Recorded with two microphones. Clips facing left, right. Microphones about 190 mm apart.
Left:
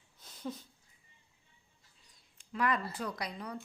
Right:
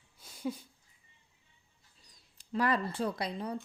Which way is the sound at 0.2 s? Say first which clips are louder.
Right 4 dB; 10° right (ahead or behind).